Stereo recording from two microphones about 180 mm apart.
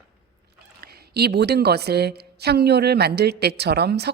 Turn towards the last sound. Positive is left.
turn(degrees=-65)  # may be behind; listen again after turning